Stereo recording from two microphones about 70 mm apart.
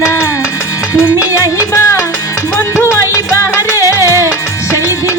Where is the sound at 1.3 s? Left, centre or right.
Left.